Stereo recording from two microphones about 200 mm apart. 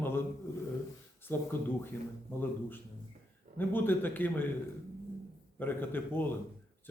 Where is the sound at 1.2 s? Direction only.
10° left (ahead or behind).